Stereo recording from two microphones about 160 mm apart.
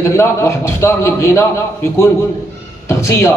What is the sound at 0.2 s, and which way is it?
A man's voice, 15° left (ahead or behind).